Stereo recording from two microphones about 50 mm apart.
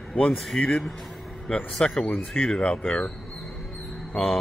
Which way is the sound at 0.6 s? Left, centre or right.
Left.